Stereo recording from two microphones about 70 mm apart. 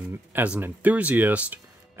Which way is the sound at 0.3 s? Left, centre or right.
Right.